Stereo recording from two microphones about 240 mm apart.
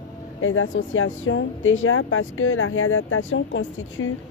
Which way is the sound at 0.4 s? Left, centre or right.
Left.